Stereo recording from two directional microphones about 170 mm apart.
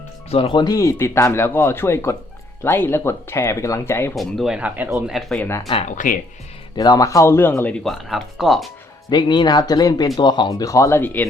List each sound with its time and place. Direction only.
0.3 s speech: 35° left (ahead or behind); by 4.1 s 15° left (ahead or behind)
4.1 s speech: centre (ahead or behind)
5.5 s speech: 20° left (ahead or behind)
5.7 s speech: 45° left (ahead or behind)
6.7 s speech: 25° left (ahead or behind); by 8.7 s centre (ahead or behind)
9.0 s speech: 25° left (ahead or behind)